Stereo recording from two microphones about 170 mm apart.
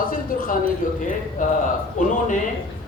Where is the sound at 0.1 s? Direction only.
55° left (ahead or behind).